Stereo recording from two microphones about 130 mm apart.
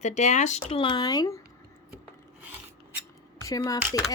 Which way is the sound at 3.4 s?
25° left (ahead or behind).